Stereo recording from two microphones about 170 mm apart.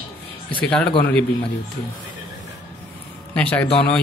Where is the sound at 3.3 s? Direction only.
10° left (ahead or behind).